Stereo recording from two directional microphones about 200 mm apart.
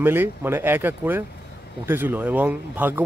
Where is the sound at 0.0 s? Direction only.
10° right (ahead or behind).